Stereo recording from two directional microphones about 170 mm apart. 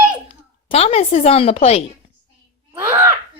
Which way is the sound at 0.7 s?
35° left (ahead or behind).